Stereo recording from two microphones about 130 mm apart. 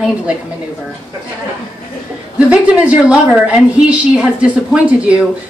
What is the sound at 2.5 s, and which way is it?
A woman's voice, 10° right (ahead or behind).